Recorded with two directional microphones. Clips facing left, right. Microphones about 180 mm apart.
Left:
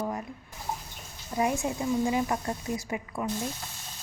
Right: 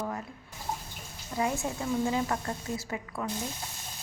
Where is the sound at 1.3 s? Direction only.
20° left (ahead or behind).